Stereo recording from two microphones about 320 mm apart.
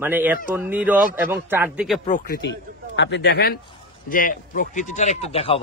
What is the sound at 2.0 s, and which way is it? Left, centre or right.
A man's voice, left.